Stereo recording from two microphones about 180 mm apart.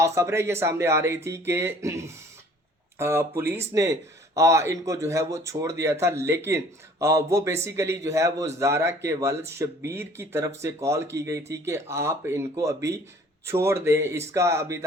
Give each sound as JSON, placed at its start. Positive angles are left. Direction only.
{"t": 0.0, "sound": "a man's voice", "side_deg": -15}